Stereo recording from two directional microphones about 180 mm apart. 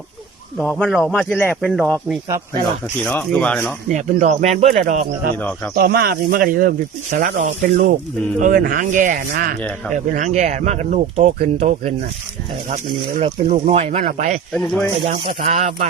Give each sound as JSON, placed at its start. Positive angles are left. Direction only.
{"t": 0.6, "sound": "a man's voice", "side_deg": 0}
{"t": 3.0, "sound": "speech", "side_deg": 10}
{"t": 3.8, "sound": "speech", "side_deg": -45}
{"t": 5.7, "sound": "speech", "side_deg": -55}
{"t": 13.1, "sound": "speech", "side_deg": -40}
{"t": 14.5, "sound": "a man's voice", "side_deg": 5}
{"t": 15.0, "sound": "speech", "side_deg": -30}